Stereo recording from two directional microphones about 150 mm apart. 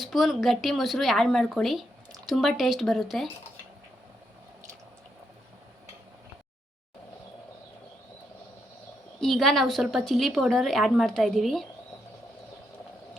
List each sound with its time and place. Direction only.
0.0 s a woman's voice: centre (ahead or behind)
9.2 s a woman's voice: 5° left (ahead or behind)